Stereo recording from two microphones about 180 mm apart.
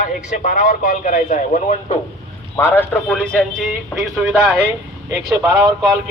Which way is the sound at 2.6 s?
15° left (ahead or behind).